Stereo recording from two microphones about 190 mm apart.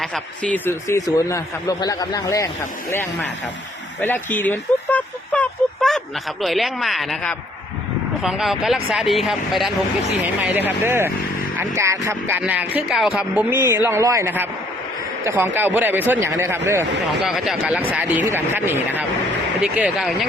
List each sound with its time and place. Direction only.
0.0 s a man's voice: 5° left (ahead or behind); by 16.8 s 15° right (ahead or behind)
17.1 s speech: centre (ahead or behind)